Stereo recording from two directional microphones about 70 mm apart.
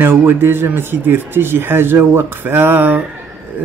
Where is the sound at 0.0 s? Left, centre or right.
Right.